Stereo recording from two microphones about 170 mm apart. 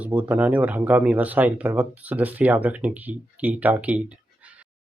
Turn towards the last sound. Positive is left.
turn(degrees=-10)  # may be behind; listen again after turning